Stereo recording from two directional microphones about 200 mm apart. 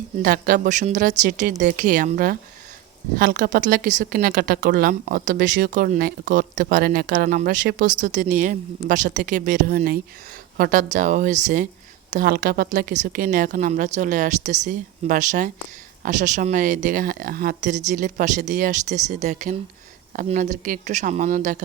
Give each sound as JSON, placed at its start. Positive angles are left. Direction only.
{"t": 0.2, "sound": "a woman's voice", "side_deg": -45}